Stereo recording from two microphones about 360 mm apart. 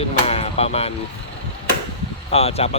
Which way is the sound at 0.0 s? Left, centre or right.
Centre.